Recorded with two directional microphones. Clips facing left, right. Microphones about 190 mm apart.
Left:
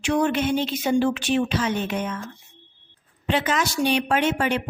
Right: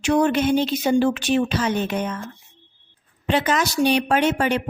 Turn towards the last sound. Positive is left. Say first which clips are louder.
# right 2 dB
turn(degrees=-40)  # may be behind; listen again after turning